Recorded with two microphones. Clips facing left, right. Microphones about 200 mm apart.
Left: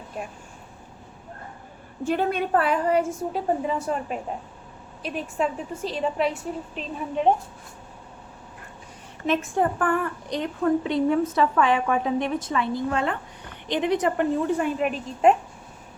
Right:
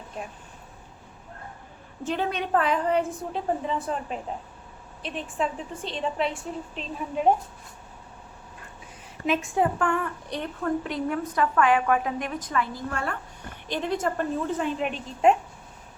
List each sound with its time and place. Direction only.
2.3 s a woman's voice: 5° left (ahead or behind)
9.2 s a woman's voice: centre (ahead or behind)
10.2 s a woman's voice: 15° left (ahead or behind)
10.9 s a woman's voice: 25° left (ahead or behind); by 15.4 s 5° left (ahead or behind)